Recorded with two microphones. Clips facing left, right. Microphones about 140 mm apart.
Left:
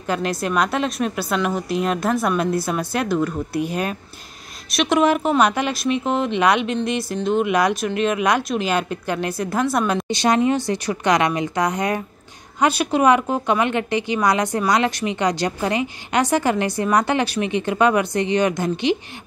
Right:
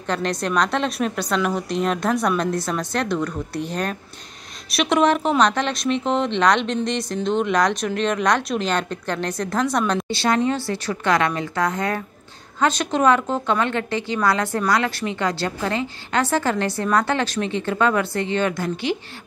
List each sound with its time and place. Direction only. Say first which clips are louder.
0.0 s a woman's voice: left 1 dB; 5° left (ahead or behind)
10.0 s a woman's voice: left 2 dB; 20° left (ahead or behind)